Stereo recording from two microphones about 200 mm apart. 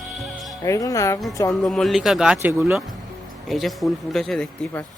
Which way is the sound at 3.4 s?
Centre (ahead or behind).